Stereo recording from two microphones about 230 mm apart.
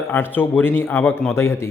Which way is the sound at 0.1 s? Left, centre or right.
Centre.